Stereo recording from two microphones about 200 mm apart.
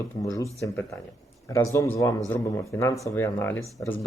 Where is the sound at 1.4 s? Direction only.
15° left (ahead or behind).